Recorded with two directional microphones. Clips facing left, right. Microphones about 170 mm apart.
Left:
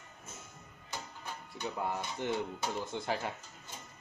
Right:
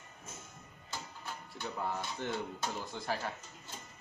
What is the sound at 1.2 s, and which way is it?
Speech, 15° left (ahead or behind).